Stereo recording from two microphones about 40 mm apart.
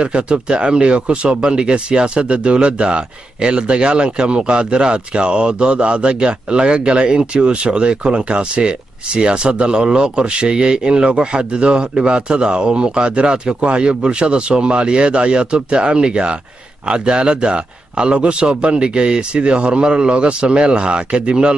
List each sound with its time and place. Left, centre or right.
0.0 s speech: right